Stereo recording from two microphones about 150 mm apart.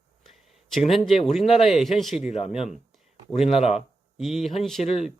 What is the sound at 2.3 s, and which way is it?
Speech, 45° left (ahead or behind).